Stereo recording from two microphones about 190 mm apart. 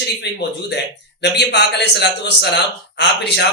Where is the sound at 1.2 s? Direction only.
60° left (ahead or behind).